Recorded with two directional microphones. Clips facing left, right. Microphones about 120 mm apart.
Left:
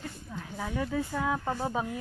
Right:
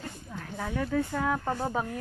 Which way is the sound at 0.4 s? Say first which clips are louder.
Right 1 dB; 10° left (ahead or behind).